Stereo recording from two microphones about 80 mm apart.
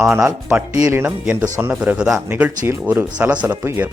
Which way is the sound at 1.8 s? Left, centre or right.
Centre.